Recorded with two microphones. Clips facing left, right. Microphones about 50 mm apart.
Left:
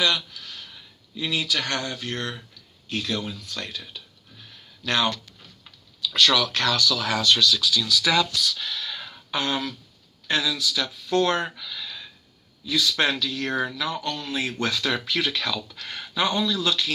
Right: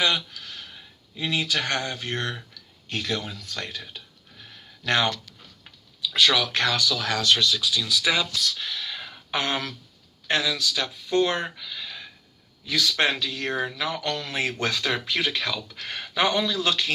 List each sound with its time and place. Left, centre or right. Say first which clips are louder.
1.1 s speech: even; right
6.0 s speech: left 1 dB; centre
7.3 s speech: left 2 dB; right
7.6 s speech: left 1 dB; centre
9.3 s speech: even; right
11.1 s speech: left 1 dB; centre
11.8 s a sound: even; right
12.6 s a man's voice: left 1 dB; right
13.0 s speech: right 1 dB; right
13.4 s speech: left 1 dB; centre
13.7 s speech: even; right
14.0 s speech: right 1 dB; right
14.3 s a man's voice: even; right
14.6 s speech: left 1 dB; right